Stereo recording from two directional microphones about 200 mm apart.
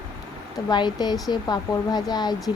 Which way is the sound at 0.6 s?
20° left (ahead or behind).